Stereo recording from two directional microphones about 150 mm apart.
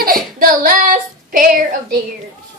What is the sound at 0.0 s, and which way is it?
Child singing, 75° right (ahead or behind).